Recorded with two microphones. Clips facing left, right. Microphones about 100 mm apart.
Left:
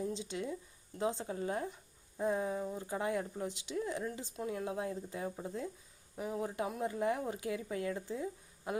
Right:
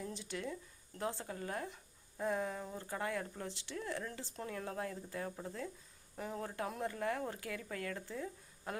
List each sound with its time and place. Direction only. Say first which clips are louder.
0.0 s a woman's voice: left 5 dB; 20° left (ahead or behind)